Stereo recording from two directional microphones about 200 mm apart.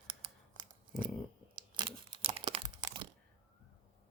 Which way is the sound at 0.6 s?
25° right (ahead or behind).